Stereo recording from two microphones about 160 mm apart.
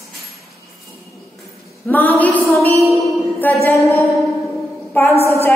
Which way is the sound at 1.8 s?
10° left (ahead or behind).